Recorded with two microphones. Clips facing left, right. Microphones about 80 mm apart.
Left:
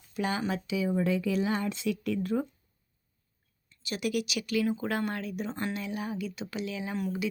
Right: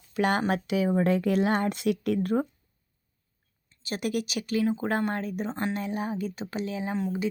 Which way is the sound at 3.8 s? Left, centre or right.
Right.